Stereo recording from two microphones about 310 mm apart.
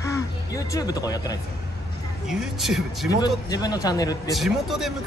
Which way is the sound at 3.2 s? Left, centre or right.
Centre.